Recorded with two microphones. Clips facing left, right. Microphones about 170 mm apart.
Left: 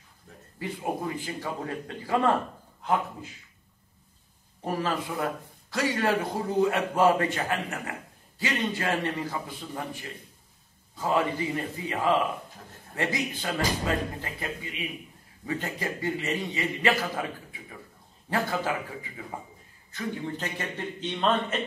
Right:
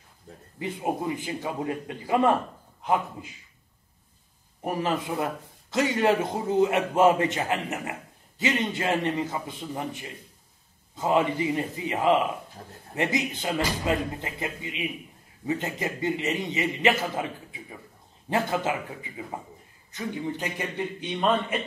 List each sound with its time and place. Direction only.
0.6 s a man's voice: 20° right (ahead or behind)
4.6 s a man's voice: 20° right (ahead or behind)